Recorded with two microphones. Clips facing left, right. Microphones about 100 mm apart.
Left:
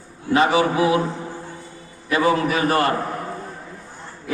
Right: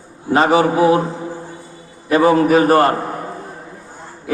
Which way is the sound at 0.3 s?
35° right (ahead or behind).